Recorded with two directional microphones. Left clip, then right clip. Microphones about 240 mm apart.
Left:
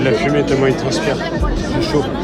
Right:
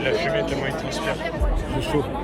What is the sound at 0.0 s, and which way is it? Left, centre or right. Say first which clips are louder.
Speech: left 7 dB; centre.